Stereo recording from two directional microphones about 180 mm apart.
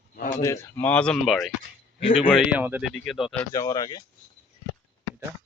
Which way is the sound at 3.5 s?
20° left (ahead or behind).